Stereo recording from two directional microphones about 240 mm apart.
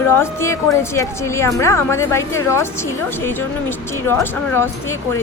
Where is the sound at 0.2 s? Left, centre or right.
Centre.